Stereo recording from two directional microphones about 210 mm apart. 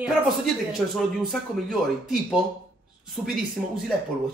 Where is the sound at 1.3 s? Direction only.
Centre (ahead or behind).